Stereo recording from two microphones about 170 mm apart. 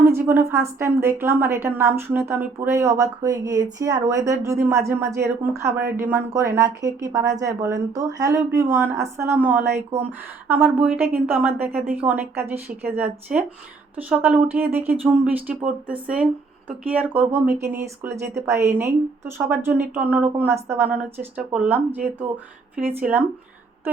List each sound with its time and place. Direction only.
0.0 s a woman's voice: 15° right (ahead or behind)
23.0 s a woman's voice: 10° right (ahead or behind)